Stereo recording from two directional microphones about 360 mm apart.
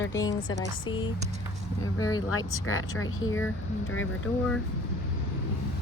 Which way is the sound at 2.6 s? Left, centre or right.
Left.